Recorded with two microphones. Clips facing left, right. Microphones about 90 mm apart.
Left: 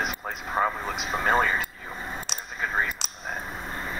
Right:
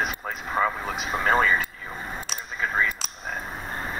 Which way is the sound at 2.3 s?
55° right (ahead or behind).